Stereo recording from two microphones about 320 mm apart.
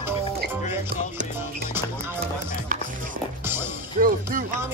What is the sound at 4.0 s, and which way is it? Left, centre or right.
Music, right.